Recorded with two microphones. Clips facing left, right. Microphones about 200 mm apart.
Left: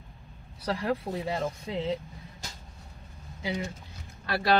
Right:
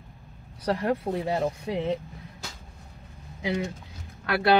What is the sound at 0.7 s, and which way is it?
Speech, 55° right (ahead or behind).